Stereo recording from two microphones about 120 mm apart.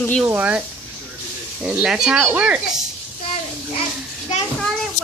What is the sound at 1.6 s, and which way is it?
Speech, 10° right (ahead or behind).